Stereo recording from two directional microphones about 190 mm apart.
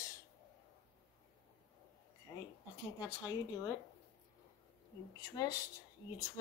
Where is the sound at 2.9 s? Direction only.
15° left (ahead or behind).